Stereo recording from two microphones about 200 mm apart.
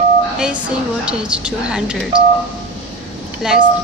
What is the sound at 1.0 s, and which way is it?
Speech, 5° right (ahead or behind).